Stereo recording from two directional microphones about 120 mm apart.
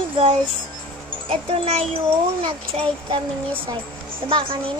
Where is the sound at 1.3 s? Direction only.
50° right (ahead or behind).